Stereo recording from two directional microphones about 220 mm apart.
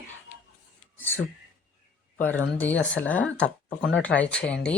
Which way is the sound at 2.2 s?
10° left (ahead or behind).